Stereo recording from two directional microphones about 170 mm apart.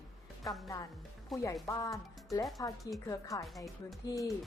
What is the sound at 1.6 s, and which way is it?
A woman's voice, 20° left (ahead or behind).